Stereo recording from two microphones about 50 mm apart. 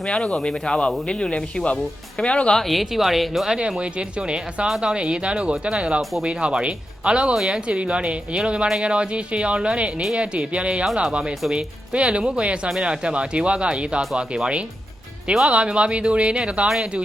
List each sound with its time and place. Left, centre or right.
0.0 s speech: centre
2.6 s speech: centre
3.8 s speech: right
16.6 s speech: centre